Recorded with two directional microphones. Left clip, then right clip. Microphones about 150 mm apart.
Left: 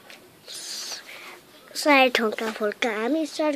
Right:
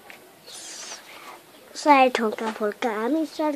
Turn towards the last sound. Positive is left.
turn(degrees=-5)  # may be behind; listen again after turning